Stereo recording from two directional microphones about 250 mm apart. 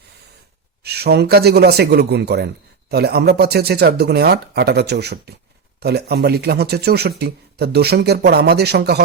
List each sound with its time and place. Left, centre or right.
0.8 s speech: right